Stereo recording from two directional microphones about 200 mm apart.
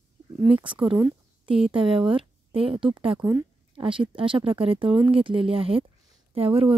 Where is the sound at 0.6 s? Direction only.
25° right (ahead or behind).